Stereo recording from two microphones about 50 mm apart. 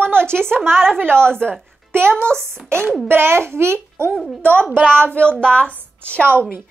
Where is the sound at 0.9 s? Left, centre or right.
Right.